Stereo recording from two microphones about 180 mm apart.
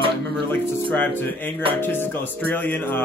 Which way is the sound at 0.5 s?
10° left (ahead or behind).